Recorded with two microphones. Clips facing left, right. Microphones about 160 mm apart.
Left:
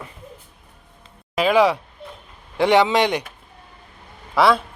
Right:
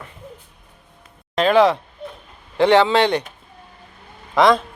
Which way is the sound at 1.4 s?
10° left (ahead or behind).